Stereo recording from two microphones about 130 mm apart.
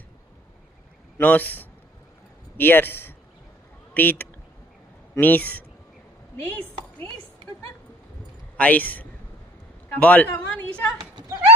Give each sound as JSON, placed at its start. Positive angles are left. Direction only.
{"t": 1.2, "sound": "a woman's voice", "side_deg": 15}
{"t": 8.5, "sound": "a man's voice", "side_deg": 10}